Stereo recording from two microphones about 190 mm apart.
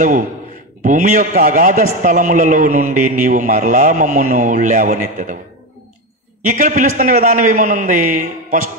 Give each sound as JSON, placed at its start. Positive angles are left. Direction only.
{"t": 0.8, "sound": "a man's voice", "side_deg": -40}
{"t": 6.5, "sound": "a man's voice", "side_deg": -40}